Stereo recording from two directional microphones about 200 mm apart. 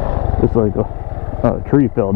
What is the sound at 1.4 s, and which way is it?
Vehicle, 25° left (ahead or behind).